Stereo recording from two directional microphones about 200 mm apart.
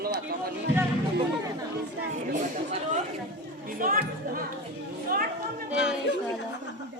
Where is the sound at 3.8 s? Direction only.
45° right (ahead or behind).